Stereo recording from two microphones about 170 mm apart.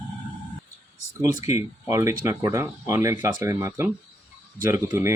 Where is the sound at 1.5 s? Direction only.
15° right (ahead or behind).